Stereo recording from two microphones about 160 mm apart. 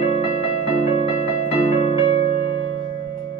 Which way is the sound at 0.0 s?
40° left (ahead or behind).